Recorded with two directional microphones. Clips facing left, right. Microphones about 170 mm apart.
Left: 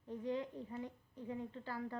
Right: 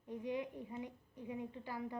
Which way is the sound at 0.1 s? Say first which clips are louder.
Even; 15° right (ahead or behind).